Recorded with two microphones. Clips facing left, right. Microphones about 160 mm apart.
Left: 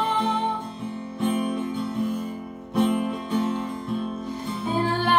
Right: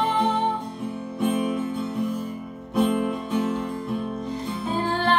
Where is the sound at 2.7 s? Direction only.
5° right (ahead or behind).